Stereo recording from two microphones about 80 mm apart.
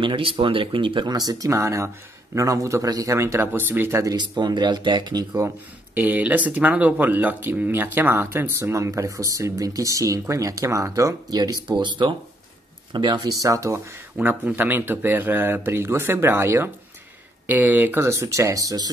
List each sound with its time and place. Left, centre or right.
0.0 s speech: right
1.1 s speech: right
1.5 s speech: right
4.2 s speech: right
5.9 s speech: right
11.2 s speech: right
11.7 s speech: right
12.9 s speech: right
13.3 s speech: right
14.1 s speech: centre
17.5 s speech: right